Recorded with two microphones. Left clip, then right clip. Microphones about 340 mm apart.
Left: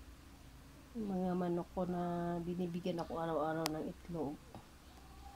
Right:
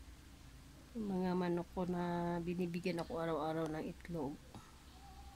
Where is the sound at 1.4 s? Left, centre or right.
Centre.